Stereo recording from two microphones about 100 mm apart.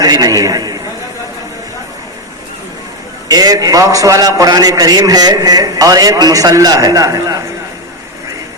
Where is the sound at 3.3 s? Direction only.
40° right (ahead or behind).